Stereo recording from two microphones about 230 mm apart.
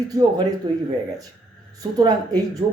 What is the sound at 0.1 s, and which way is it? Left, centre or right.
Speech, centre.